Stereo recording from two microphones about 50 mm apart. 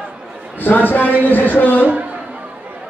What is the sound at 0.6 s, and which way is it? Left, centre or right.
Music, left.